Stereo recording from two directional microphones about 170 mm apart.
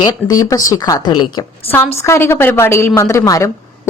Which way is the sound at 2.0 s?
15° left (ahead or behind).